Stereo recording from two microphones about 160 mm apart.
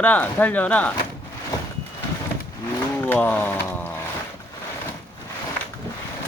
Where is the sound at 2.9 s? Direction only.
10° left (ahead or behind).